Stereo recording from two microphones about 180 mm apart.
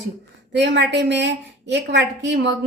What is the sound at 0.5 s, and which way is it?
Speech, 75° right (ahead or behind).